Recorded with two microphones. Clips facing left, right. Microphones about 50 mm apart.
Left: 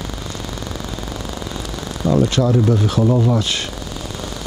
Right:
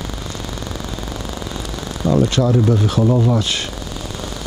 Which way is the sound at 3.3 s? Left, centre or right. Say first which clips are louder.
Even; centre.